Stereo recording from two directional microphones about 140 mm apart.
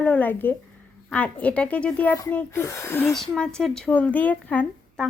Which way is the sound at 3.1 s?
5° left (ahead or behind).